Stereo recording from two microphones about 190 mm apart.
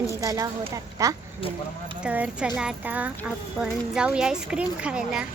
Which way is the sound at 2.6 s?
5° right (ahead or behind).